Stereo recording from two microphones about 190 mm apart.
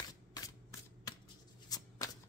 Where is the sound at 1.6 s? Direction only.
20° left (ahead or behind).